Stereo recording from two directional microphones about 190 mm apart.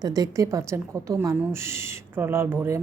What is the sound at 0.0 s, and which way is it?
A woman's voice, 20° right (ahead or behind).